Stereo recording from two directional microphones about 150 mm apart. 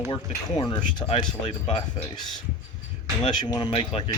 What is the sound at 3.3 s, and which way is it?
Speech, 30° left (ahead or behind).